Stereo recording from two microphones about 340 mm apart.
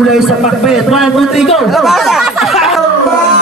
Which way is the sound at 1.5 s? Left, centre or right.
Centre.